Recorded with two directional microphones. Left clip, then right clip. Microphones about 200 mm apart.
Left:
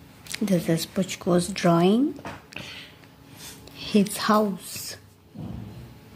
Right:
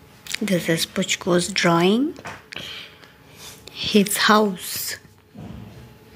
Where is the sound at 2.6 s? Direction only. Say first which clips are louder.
Right 5 dB; 45° right (ahead or behind).